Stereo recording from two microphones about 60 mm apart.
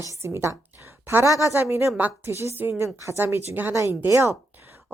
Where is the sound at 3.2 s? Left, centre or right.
Right.